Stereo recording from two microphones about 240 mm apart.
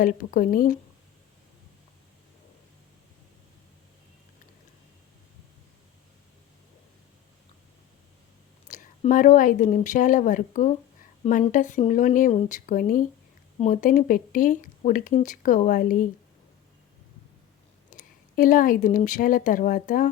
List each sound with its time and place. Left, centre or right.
0.0 s speech: left
8.6 s a woman's voice: left
17.9 s speech: left